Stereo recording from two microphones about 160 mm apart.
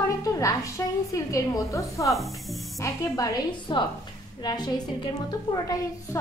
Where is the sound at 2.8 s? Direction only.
20° left (ahead or behind).